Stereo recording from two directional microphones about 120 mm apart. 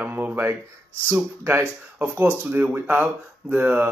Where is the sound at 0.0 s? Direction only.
15° right (ahead or behind).